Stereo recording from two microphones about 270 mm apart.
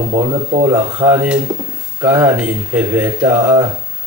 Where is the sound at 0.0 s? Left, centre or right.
Right.